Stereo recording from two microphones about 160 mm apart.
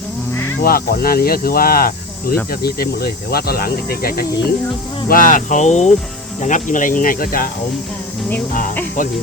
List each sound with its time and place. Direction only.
0.6 s speech: 70° left (ahead or behind)
5.0 s speech: 60° left (ahead or behind)